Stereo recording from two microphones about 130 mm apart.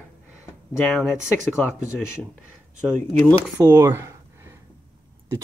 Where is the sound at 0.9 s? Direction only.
5° right (ahead or behind).